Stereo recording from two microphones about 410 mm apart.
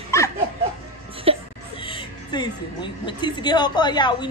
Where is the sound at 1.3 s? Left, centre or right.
Centre.